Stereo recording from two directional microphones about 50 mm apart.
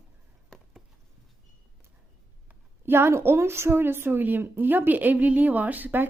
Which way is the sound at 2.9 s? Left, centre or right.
Right.